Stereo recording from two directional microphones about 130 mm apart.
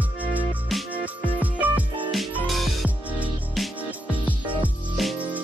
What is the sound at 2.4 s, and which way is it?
Music, centre (ahead or behind).